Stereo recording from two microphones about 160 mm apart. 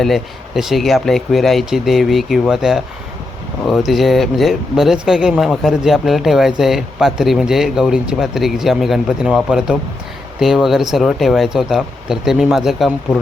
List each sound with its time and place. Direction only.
0.0 s speech: centre (ahead or behind)